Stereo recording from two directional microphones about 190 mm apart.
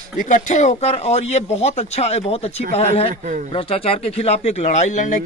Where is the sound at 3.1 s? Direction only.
40° right (ahead or behind).